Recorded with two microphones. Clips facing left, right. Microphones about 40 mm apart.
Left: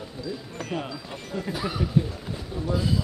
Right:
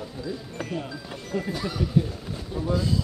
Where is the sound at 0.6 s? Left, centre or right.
Left.